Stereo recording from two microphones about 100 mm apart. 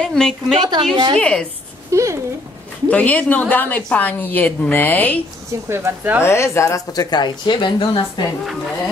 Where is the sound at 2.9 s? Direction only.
15° left (ahead or behind).